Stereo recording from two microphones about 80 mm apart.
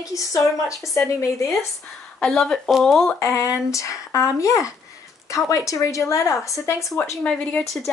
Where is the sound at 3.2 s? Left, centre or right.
Left.